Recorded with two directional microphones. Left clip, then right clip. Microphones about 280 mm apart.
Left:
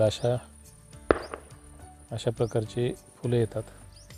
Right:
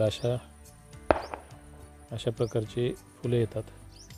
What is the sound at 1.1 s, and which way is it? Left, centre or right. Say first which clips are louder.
Music: left 1 dB; centre.